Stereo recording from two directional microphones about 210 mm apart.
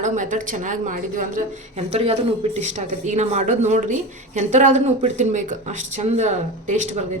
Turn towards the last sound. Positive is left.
turn(degrees=-35)  # may be behind; listen again after turning